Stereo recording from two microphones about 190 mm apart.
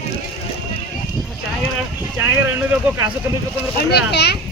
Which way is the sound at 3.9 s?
60° left (ahead or behind).